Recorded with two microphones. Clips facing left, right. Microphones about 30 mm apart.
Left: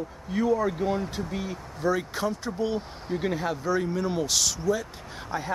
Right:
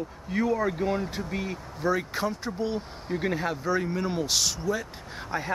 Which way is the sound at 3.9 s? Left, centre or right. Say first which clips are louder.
Left 1 dB; centre.